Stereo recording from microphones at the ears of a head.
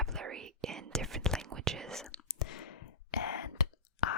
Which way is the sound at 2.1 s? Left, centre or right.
Left.